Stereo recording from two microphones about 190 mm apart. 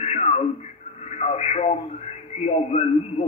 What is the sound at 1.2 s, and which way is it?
Radio, 35° left (ahead or behind).